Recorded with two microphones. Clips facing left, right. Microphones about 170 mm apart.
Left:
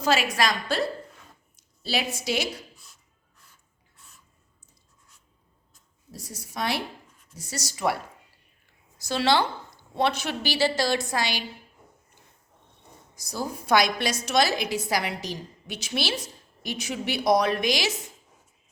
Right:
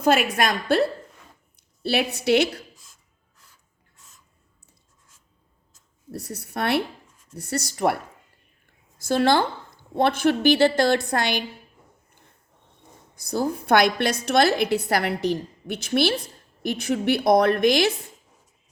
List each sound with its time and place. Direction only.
0.0 s a woman's voice: 55° right (ahead or behind)
6.1 s a woman's voice: 65° right (ahead or behind)
9.0 s a woman's voice: 50° right (ahead or behind)
13.1 s a woman's voice: 60° right (ahead or behind)